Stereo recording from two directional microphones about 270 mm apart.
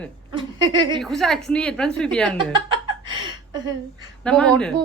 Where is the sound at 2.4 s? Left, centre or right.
Centre.